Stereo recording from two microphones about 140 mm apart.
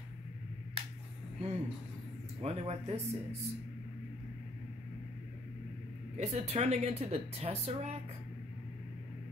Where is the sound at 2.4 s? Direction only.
45° right (ahead or behind).